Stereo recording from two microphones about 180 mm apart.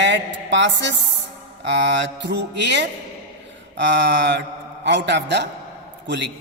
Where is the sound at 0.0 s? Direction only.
80° right.